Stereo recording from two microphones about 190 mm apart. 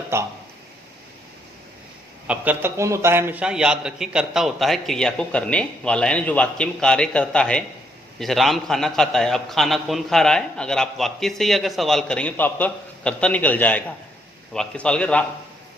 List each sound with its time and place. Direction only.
0.1 s speech: 15° right (ahead or behind)
2.2 s a man's voice: 5° right (ahead or behind)